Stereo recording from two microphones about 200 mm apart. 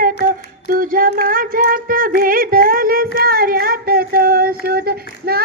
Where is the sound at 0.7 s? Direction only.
45° right (ahead or behind).